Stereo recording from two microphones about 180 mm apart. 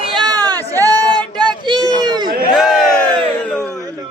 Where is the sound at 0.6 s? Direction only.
10° left (ahead or behind).